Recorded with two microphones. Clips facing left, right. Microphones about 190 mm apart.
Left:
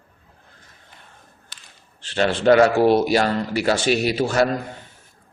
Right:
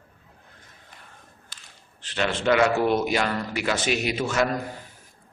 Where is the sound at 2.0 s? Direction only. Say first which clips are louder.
Left 6 dB; 35° left (ahead or behind).